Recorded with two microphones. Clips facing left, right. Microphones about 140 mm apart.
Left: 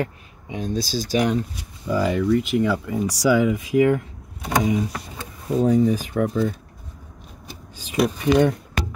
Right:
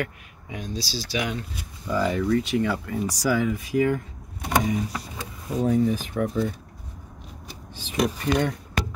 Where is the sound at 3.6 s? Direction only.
80° left.